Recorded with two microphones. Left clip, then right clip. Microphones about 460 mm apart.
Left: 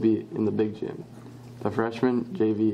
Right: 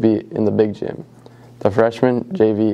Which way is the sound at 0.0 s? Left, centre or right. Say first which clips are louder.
Right 8 dB; right.